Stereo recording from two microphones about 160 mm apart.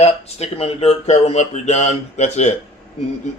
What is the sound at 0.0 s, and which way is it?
Speech, 40° left (ahead or behind).